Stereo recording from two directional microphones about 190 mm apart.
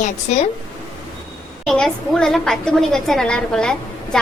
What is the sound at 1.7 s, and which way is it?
A woman's voice, centre (ahead or behind).